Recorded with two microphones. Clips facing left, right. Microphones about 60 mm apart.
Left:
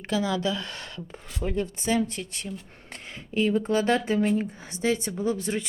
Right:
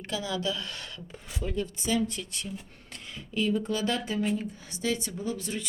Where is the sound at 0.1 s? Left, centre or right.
Left.